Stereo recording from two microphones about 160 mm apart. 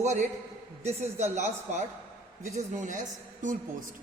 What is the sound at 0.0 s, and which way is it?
Speech, 45° right (ahead or behind).